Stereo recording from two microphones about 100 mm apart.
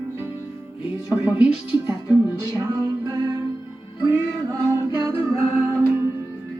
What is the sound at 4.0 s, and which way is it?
Music, 25° right (ahead or behind).